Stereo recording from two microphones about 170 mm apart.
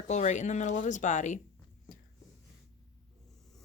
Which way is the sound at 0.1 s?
45° left (ahead or behind).